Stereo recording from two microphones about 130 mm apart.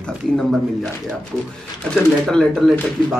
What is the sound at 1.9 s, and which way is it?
Speech, 5° left (ahead or behind).